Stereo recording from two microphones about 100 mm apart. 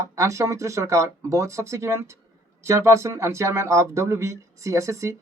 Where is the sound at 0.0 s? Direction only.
30° right (ahead or behind).